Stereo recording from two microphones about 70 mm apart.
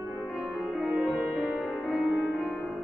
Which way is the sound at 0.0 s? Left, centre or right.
Right.